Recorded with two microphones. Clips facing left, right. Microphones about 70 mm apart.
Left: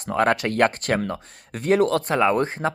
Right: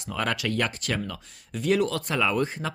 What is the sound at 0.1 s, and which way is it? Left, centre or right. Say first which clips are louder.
Speech: left 7 dB; left.